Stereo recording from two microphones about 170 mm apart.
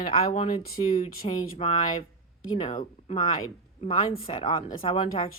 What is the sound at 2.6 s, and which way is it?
Speech, 45° left (ahead or behind).